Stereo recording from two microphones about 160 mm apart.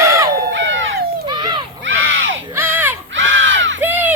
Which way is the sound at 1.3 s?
30° right (ahead or behind).